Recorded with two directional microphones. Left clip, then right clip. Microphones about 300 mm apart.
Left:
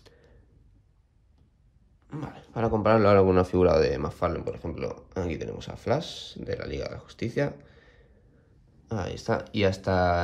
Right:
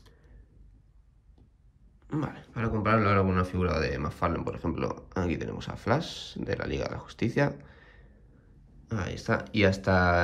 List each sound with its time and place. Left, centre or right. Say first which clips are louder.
2.0 s speech: right 5 dB; centre